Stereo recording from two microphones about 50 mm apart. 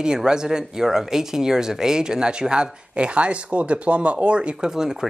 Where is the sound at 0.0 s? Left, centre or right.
Centre.